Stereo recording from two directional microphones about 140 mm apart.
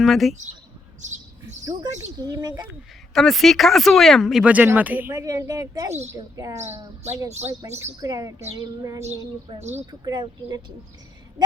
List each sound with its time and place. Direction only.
0.0 s speech: centre (ahead or behind)
1.0 s speech: 60° right (ahead or behind)
2.1 s speech: 25° right (ahead or behind)
3.2 s speech: centre (ahead or behind); by 6.6 s 25° right (ahead or behind)
7.3 s speech: 50° right (ahead or behind)
8.0 s speech: 25° right (ahead or behind)
9.6 s speech: 50° right (ahead or behind)
9.9 s speech: 30° right (ahead or behind)